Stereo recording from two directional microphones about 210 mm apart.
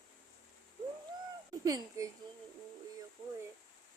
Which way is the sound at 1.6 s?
15° right (ahead or behind).